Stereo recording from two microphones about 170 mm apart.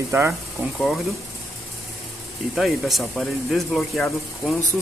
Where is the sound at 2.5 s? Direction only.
Centre (ahead or behind).